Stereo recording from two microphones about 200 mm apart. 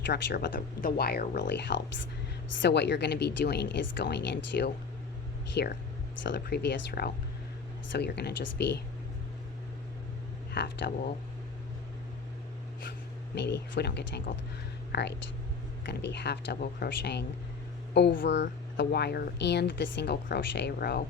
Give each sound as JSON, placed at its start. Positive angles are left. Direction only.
{"t": 0.0, "sound": "speech", "side_deg": 60}
{"t": 10.5, "sound": "speech", "side_deg": 55}
{"t": 13.3, "sound": "speech", "side_deg": 60}